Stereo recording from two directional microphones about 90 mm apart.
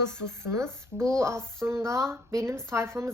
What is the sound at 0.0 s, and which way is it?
Speech, 30° right (ahead or behind).